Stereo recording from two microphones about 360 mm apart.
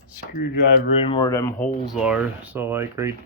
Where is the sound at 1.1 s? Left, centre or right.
Centre.